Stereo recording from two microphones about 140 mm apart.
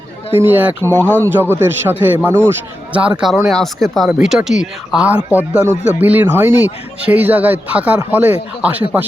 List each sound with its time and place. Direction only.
0.3 s speech: 15° right (ahead or behind)
0.9 s speech: 15° left (ahead or behind)
1.1 s speech: 15° right (ahead or behind)